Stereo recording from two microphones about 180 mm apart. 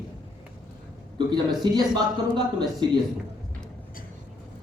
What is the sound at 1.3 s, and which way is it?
Speech, 25° right (ahead or behind).